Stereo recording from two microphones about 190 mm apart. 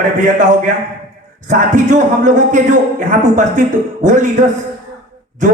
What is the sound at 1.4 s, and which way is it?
A man's voice, 40° right (ahead or behind).